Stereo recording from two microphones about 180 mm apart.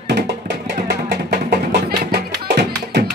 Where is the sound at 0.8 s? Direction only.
65° right (ahead or behind).